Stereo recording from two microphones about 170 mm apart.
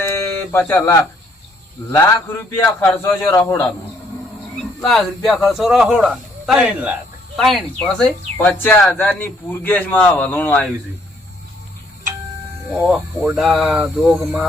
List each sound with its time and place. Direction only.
0.5 s speech: 10° left (ahead or behind)
4.8 s speech: centre (ahead or behind)
12.7 s speech: centre (ahead or behind)